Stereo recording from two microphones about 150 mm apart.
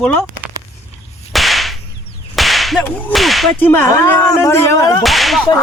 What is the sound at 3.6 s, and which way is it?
Speech, 15° left (ahead or behind).